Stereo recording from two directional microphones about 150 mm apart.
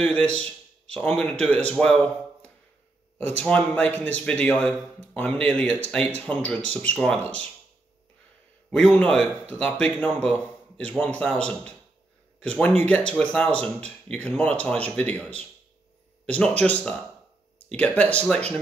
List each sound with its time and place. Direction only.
0.0 s a man's voice: 10° left (ahead or behind)
8.6 s a man's voice: 5° left (ahead or behind)